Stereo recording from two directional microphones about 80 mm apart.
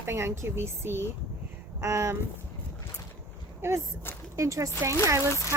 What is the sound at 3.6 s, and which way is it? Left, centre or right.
Speech, right.